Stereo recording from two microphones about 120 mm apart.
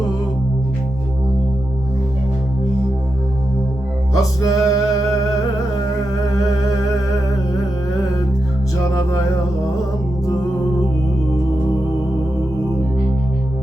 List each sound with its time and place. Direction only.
4.2 s music: 30° left (ahead or behind)